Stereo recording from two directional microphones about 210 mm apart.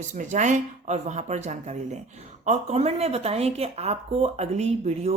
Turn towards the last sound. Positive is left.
turn(degrees=-30)  # may be behind; listen again after turning